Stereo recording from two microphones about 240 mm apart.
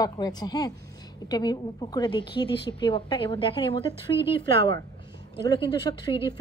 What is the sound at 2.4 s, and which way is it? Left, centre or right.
Speech, left.